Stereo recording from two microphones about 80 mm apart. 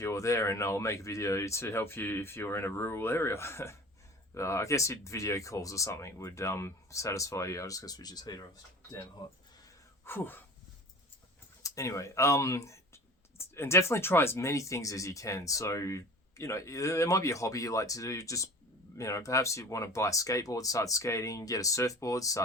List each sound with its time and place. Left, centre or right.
0.0 s speech: left
10.1 s speech: left
11.6 s speech: left